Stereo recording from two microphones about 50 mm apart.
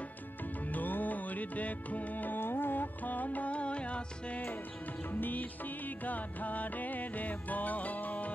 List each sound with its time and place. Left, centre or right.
0.7 s music: left
5.2 s music: left